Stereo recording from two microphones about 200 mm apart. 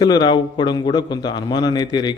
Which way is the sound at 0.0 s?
20° left (ahead or behind).